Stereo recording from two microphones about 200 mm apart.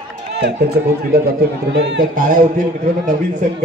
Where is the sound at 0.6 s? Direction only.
50° right (ahead or behind).